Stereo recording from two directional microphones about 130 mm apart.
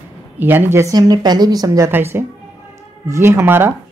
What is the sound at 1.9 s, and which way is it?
Speech, 15° right (ahead or behind).